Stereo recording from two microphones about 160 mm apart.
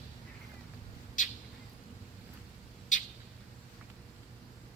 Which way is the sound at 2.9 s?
50° left (ahead or behind).